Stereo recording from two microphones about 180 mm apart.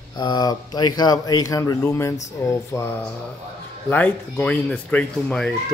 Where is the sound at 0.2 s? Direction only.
25° left (ahead or behind).